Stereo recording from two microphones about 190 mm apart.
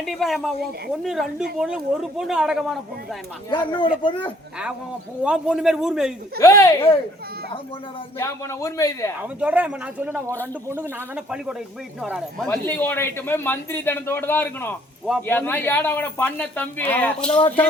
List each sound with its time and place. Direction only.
0.0 s speech: centre (ahead or behind)
3.5 s speech: 25° left (ahead or behind)
5.2 s speech: 5° right (ahead or behind)
6.4 s a man's voice: 15° left (ahead or behind)
8.2 s a man's voice: 15° left (ahead or behind)
9.2 s speech: 10° right (ahead or behind)
12.5 s a man's voice: 10° left (ahead or behind)